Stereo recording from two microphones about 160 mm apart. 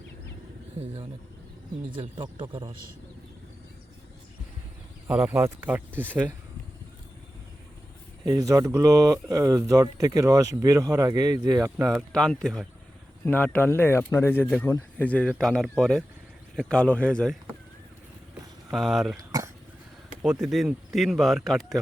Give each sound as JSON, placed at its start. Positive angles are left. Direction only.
{"t": 2.0, "sound": "speech", "side_deg": -30}
{"t": 5.0, "sound": "speech", "side_deg": -10}
{"t": 8.2, "sound": "speech", "side_deg": -20}
{"t": 11.8, "sound": "speech", "side_deg": 0}
{"t": 18.7, "sound": "speech", "side_deg": 0}
{"t": 20.2, "sound": "speech", "side_deg": -5}